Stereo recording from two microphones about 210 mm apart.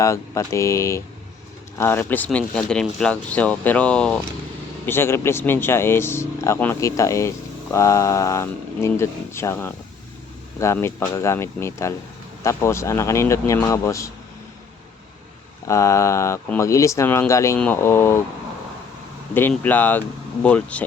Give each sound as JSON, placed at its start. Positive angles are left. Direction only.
{"t": 0.0, "sound": "speech", "side_deg": 15}
{"t": 15.6, "sound": "speech", "side_deg": 15}
{"t": 19.3, "sound": "speech", "side_deg": 10}